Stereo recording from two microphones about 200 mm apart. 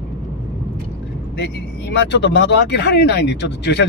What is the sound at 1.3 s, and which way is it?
Speech, 60° left (ahead or behind).